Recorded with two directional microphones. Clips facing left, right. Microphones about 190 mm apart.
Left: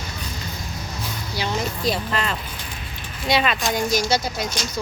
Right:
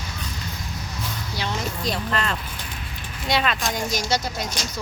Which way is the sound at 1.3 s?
5° left (ahead or behind).